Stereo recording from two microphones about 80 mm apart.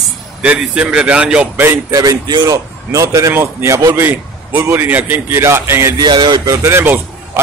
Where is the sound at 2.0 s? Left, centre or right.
Right.